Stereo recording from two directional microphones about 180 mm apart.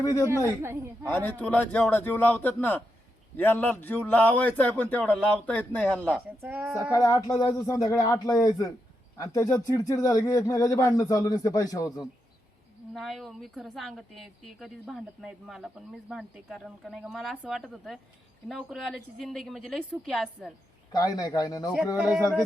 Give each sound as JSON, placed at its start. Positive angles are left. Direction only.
{"t": 0.0, "sound": "a man's voice", "side_deg": 15}
{"t": 0.3, "sound": "a woman's voice", "side_deg": -15}
{"t": 1.0, "sound": "a man's voice", "side_deg": 10}
{"t": 6.4, "sound": "a woman's voice", "side_deg": -10}
{"t": 6.9, "sound": "speech", "side_deg": 20}
{"t": 12.9, "sound": "a woman's voice", "side_deg": 0}
{"t": 20.9, "sound": "speech", "side_deg": 20}
{"t": 21.9, "sound": "a woman's voice", "side_deg": -5}